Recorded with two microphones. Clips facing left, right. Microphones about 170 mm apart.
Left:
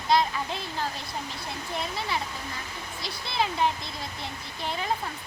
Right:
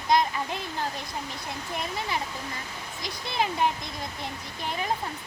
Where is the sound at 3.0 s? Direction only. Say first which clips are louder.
Even; 15° right (ahead or behind).